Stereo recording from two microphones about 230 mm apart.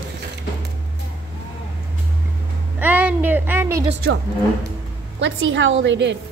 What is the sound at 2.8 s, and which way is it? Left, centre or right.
A child's voice, centre.